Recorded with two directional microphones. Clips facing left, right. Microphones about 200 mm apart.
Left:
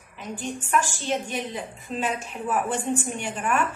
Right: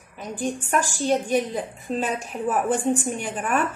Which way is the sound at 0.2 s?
40° right (ahead or behind).